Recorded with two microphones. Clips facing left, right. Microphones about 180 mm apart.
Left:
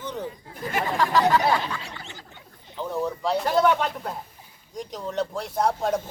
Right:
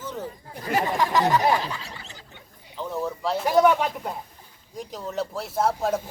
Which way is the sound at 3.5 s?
10° right (ahead or behind).